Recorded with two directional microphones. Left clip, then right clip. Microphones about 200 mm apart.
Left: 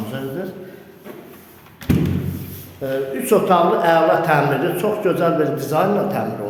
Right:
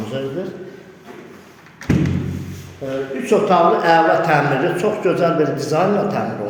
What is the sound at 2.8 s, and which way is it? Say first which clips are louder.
Speech: left 2 dB; 15° left (ahead or behind).